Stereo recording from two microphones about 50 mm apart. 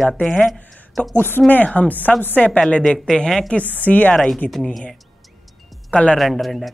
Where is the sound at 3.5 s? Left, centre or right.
Left.